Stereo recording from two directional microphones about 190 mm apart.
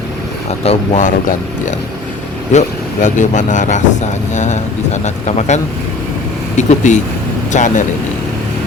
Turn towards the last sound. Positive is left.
turn(degrees=40)  # may be behind; listen again after turning